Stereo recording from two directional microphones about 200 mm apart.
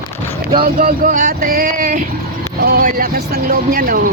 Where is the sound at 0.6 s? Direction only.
45° right (ahead or behind).